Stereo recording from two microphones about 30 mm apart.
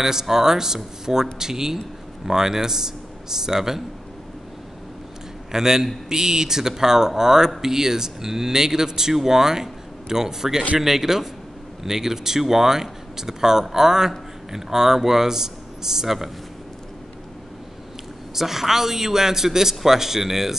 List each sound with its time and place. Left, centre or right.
0.0 s speech: centre
5.5 s a man's voice: centre
18.3 s speech: centre